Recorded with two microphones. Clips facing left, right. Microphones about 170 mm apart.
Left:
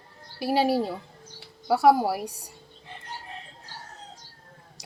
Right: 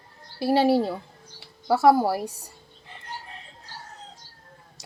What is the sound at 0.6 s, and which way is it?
Speech, 30° right (ahead or behind).